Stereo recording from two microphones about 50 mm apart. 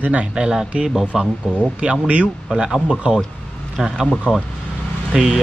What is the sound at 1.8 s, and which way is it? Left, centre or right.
Speech, right.